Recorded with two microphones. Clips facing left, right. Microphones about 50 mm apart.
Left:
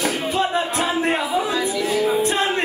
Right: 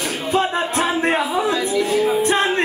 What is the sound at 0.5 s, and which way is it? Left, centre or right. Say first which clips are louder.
Music: right 1 dB; right.